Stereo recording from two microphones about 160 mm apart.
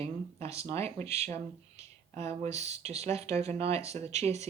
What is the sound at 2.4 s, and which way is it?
Speech, 45° right (ahead or behind).